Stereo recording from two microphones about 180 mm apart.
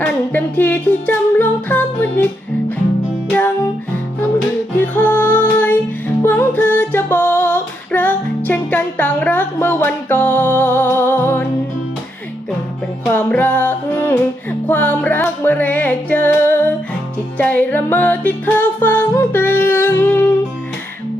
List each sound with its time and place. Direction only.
0.0 s music: 10° left (ahead or behind)
3.3 s music: 10° left (ahead or behind)
6.2 s female singing: 10° left (ahead or behind)
13.1 s music: 10° left (ahead or behind)